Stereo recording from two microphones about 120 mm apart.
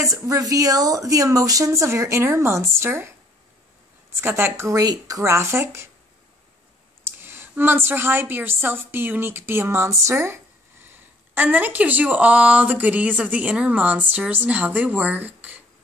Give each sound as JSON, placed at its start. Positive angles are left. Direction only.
{"t": 0.0, "sound": "speech", "side_deg": -25}
{"t": 4.1, "sound": "speech", "side_deg": -20}
{"t": 7.1, "sound": "a woman's voice", "side_deg": -20}